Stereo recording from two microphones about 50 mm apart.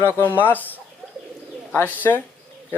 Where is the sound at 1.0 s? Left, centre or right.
Centre.